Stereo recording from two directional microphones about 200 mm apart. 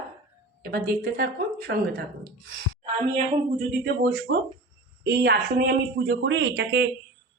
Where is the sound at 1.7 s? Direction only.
60° right (ahead or behind).